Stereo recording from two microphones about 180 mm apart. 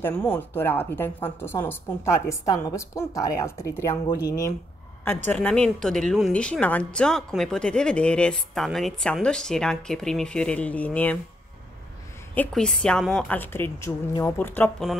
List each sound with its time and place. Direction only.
0.0 s a woman's voice: 10° left (ahead or behind)
12.4 s a woman's voice: 5° left (ahead or behind)